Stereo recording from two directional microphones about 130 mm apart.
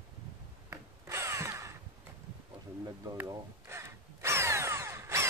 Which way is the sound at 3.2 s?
20° right (ahead or behind).